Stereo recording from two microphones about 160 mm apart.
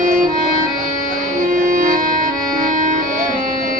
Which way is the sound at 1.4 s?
55° right (ahead or behind).